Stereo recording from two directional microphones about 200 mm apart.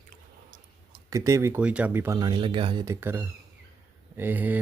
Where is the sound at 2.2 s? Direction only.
25° right (ahead or behind).